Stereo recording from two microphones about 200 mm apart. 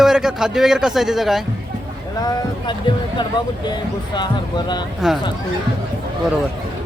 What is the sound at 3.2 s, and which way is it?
Speech, 20° left (ahead or behind).